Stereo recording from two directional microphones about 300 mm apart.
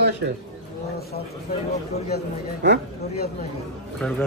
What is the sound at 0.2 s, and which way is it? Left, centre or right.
Speech, right.